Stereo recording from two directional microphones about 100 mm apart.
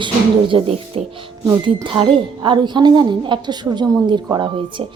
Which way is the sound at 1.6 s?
55° right (ahead or behind).